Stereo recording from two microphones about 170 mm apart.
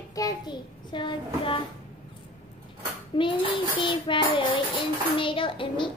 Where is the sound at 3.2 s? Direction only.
30° left (ahead or behind).